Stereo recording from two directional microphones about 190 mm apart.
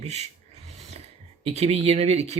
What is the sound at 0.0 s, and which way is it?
Filing, 35° right (ahead or behind).